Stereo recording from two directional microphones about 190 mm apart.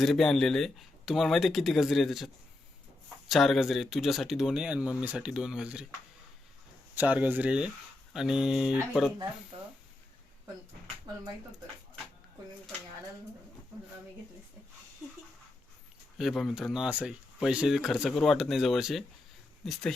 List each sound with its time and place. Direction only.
0.0 s speech: centre (ahead or behind)
6.9 s speech: 10° right (ahead or behind)
11.1 s speech: 20° right (ahead or behind)
16.1 s speech: centre (ahead or behind)